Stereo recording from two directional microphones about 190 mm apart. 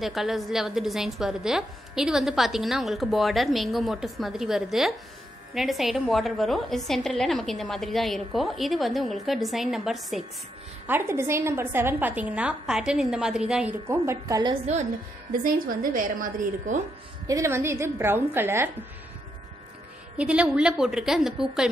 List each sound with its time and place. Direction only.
0.0 s a woman's voice: centre (ahead or behind)
10.9 s a woman's voice: 10° right (ahead or behind)
15.4 s a woman's voice: 45° right (ahead or behind)
17.3 s a woman's voice: 15° right (ahead or behind)
20.2 s a woman's voice: 5° right (ahead or behind)